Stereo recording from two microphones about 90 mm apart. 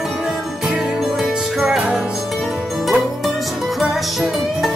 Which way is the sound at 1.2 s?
5° right (ahead or behind).